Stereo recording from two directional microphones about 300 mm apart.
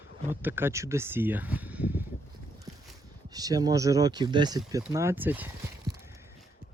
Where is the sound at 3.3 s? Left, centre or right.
Centre.